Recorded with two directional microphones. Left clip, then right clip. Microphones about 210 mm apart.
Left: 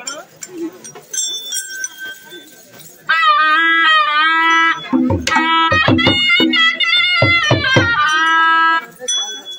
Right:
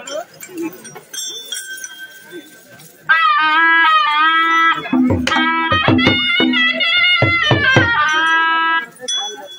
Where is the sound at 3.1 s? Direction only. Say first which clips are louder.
Left 1 dB; 40° left (ahead or behind).